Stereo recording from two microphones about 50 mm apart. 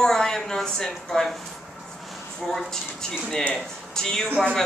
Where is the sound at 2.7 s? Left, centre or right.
Centre.